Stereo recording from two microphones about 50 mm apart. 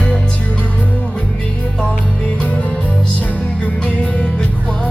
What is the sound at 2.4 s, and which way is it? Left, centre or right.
Music, left.